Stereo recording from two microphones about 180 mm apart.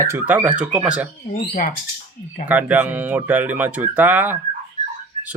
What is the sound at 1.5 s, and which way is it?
Speech, 50° left (ahead or behind).